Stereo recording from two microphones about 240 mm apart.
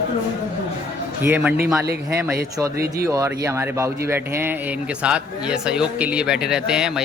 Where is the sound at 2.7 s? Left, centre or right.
Right.